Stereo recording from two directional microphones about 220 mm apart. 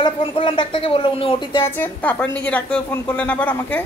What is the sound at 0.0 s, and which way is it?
Speech, 25° left (ahead or behind).